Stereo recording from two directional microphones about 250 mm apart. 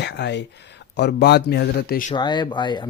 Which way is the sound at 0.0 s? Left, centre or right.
Left.